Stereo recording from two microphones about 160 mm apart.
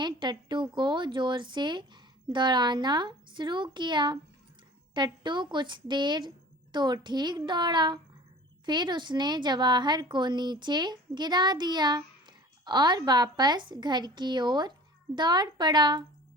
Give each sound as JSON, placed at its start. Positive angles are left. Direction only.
{"t": 0.0, "sound": "a woman's voice", "side_deg": -30}